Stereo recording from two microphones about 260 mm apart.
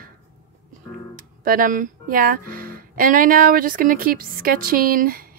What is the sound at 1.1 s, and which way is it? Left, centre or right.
Speech, right.